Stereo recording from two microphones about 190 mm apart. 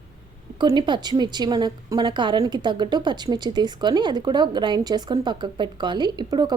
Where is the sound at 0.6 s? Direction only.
25° right (ahead or behind).